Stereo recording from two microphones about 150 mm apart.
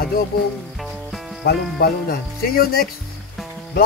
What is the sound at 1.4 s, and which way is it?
Speech, 90° left.